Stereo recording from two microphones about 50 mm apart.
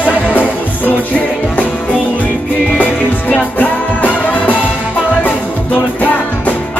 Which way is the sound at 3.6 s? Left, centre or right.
Left.